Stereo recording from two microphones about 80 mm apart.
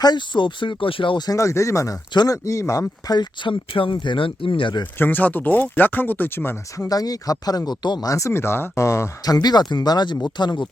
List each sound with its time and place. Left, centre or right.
0.0 s speech: left
1.3 s speech: left
3.1 s speech: left
4.9 s speech: left
6.7 s speech: left
8.0 s speech: left
9.3 s speech: left